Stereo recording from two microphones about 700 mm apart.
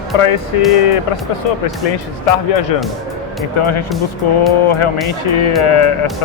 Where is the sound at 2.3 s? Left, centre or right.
Left.